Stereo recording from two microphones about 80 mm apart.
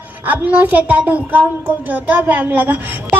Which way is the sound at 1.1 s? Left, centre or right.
Right.